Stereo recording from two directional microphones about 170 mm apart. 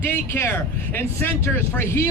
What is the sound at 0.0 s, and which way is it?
Speech, 15° left (ahead or behind).